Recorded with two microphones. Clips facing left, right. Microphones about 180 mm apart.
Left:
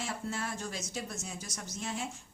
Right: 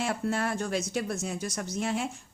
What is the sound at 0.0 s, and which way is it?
Speech, 65° right (ahead or behind).